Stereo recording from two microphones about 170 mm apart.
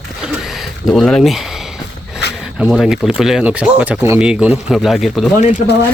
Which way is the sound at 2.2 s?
85° left.